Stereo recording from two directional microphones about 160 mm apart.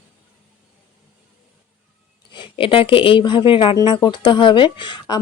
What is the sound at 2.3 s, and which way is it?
Speech, 30° left (ahead or behind).